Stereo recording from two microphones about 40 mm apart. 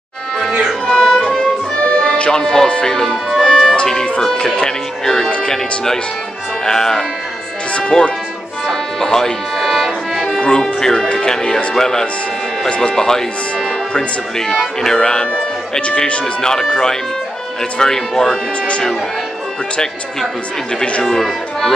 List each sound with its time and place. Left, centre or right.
0.5 s music: centre
0.8 s music: centre
1.8 s music: left
2.3 s speech: centre
3.4 s music: centre
3.7 s speech: centre
8.6 s music: centre
10.6 s speech: centre
12.6 s speech: left
12.9 s speech: centre
14.9 s speech: centre
16.3 s speech: centre
17.7 s speech: centre
21.0 s speech: centre